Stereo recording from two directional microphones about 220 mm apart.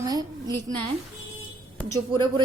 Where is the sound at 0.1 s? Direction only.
15° right (ahead or behind).